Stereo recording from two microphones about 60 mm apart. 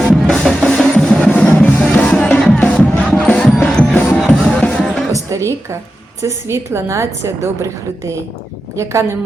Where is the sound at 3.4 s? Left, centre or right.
Centre.